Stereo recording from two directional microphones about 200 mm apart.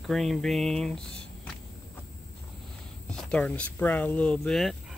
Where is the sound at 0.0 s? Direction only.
Centre (ahead or behind).